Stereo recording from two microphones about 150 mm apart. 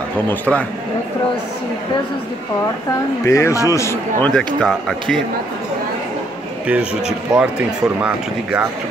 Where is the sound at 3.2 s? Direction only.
20° left (ahead or behind).